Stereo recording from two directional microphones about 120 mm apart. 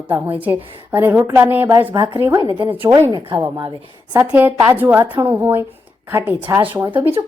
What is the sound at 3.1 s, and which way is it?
Speech, 40° right (ahead or behind).